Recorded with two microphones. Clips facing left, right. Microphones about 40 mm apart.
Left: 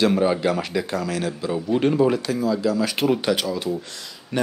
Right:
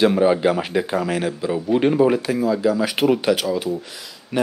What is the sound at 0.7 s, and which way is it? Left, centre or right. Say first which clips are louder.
Speech: right 4 dB; right.